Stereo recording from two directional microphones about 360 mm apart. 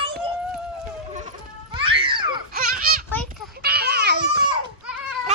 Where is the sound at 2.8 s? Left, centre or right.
Right.